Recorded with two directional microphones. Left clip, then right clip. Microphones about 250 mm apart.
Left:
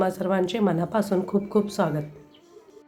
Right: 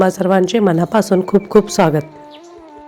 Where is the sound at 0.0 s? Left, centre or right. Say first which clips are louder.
Right 10 dB; right.